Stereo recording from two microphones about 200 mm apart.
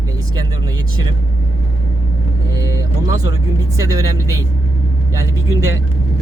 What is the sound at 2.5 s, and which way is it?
Speech, 15° right (ahead or behind).